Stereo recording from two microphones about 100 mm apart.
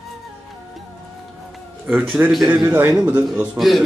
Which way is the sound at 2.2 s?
20° right (ahead or behind).